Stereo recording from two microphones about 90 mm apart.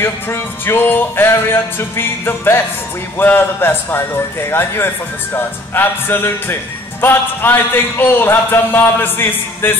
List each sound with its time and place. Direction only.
0.0 s a man's voice: 25° left (ahead or behind)